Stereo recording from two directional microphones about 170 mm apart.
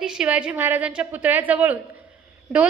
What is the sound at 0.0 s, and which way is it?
A woman's voice, 5° right (ahead or behind).